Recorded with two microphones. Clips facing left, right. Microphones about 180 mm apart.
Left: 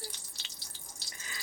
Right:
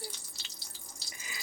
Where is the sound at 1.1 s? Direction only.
10° right (ahead or behind).